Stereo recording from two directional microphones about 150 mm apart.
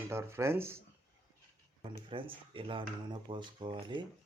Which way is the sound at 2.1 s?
35° right (ahead or behind).